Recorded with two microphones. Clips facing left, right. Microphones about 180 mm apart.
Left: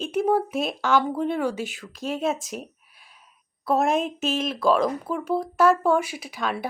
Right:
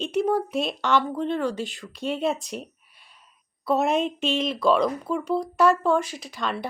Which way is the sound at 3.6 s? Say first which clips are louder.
Even; centre (ahead or behind).